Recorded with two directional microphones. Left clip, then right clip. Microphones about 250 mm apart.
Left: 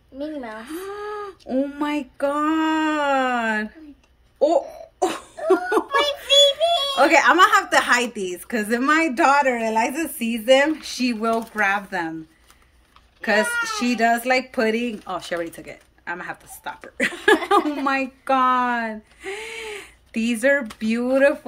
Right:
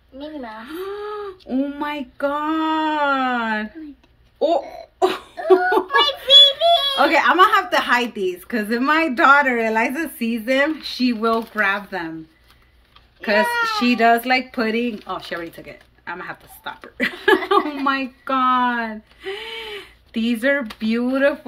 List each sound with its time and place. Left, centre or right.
0.6 s speech: centre
1.5 s a sound: centre
5.0 s laughter: centre
7.0 s a woman's voice: centre
13.2 s a woman's voice: centre